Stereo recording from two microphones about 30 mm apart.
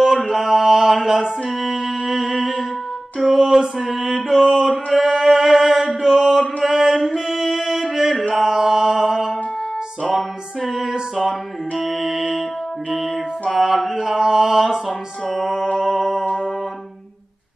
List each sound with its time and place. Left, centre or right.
0.4 s mantra: centre
1.5 s music: centre
3.8 s mantra: centre
7.2 s music: centre
8.1 s mantra: centre
10.1 s music: centre
13.7 s a sound: centre
14.9 s music: centre
15.4 s mantra: centre
15.8 s music: centre